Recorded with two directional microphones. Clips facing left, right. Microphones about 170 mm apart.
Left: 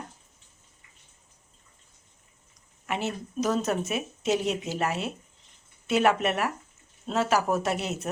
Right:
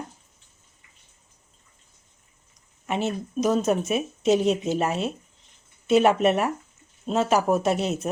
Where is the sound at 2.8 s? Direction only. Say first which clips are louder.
Right 4 dB; 20° right (ahead or behind).